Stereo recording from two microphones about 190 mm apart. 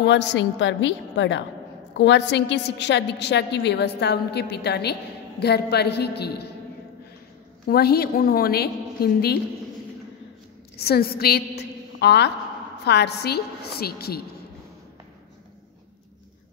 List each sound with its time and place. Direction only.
0.0 s a woman's voice: 65° left (ahead or behind)
7.6 s a woman's voice: 55° left (ahead or behind)
10.8 s a woman's voice: 55° left (ahead or behind)